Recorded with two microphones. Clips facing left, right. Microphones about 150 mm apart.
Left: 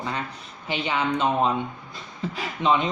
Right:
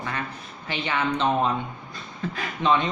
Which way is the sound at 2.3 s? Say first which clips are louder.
Even; 15° left (ahead or behind).